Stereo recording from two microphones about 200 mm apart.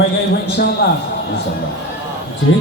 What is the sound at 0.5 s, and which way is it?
Music, 55° left (ahead or behind).